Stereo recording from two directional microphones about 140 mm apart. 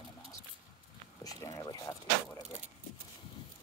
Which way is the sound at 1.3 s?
25° left (ahead or behind).